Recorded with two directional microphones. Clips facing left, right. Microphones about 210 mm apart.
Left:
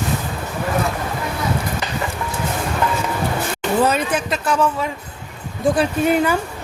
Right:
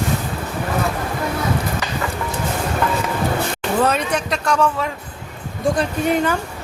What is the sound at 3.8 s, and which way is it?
A child's voice, 5° left (ahead or behind).